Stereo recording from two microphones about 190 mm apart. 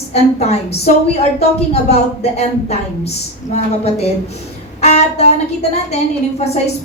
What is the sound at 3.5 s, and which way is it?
Speech, 35° left (ahead or behind).